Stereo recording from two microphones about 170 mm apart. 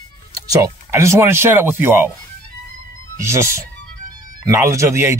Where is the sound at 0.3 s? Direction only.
20° right (ahead or behind).